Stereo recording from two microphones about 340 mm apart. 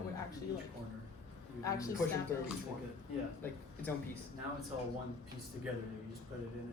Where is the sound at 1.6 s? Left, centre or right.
Centre.